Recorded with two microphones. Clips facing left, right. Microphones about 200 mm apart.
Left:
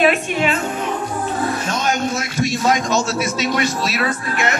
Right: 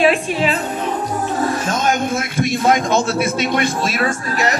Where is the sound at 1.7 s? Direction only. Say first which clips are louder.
Right 2 dB; 50° right (ahead or behind).